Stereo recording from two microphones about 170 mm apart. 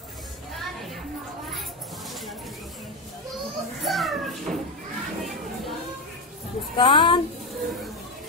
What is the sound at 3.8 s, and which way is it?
Children playing, centre (ahead or behind).